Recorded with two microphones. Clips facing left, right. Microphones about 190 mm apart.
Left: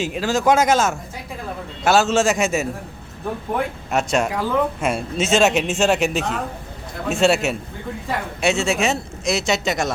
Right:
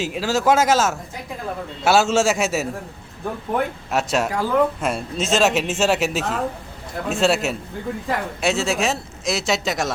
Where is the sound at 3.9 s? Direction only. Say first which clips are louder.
Left 4 dB; 5° right (ahead or behind).